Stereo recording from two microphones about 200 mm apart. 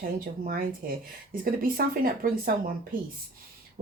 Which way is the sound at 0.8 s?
45° right (ahead or behind).